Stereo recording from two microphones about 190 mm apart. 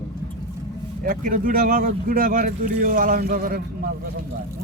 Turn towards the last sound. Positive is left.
turn(degrees=-50)  # may be behind; listen again after turning